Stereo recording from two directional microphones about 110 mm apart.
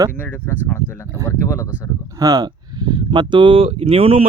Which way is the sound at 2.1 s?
35° right (ahead or behind).